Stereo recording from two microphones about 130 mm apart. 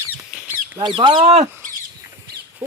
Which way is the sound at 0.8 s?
35° right (ahead or behind).